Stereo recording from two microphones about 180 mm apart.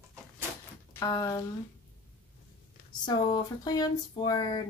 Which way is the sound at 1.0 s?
20° left (ahead or behind).